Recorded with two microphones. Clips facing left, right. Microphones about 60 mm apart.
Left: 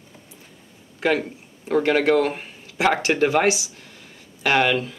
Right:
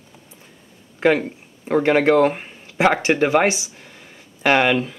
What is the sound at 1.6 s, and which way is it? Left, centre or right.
Speech, right.